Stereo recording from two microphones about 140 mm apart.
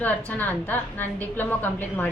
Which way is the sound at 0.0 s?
10° left (ahead or behind).